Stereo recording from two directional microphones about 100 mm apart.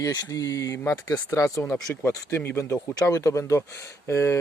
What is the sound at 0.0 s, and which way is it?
Speech, 35° left (ahead or behind).